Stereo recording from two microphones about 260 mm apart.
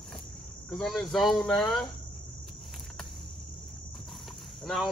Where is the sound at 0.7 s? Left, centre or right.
Centre.